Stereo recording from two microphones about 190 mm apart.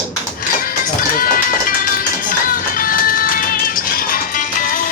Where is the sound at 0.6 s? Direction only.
50° left (ahead or behind).